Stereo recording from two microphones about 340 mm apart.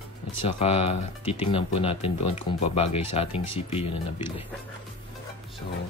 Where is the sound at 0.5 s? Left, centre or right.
Centre.